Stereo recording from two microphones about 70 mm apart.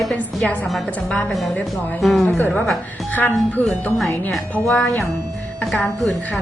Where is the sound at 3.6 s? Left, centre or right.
Left.